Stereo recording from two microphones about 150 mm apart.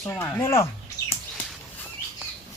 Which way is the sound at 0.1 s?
15° left (ahead or behind).